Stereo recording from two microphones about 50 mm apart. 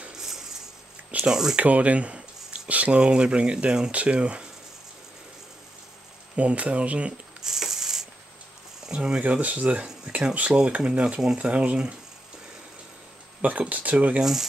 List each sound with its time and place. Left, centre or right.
0.1 s a sound: centre
1.3 s speech: centre
1.6 s a sound: right
2.7 s speech: right
3.9 s speech: right
6.3 s speech: right
7.4 s a sound: centre
8.8 s speech: centre
9.2 s speech: right
13.4 s speech: right